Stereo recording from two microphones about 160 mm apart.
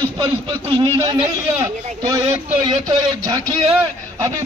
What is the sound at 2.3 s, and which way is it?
A man's voice, 30° right (ahead or behind).